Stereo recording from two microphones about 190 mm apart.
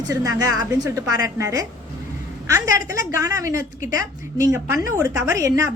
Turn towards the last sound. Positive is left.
turn(degrees=-15)  # may be behind; listen again after turning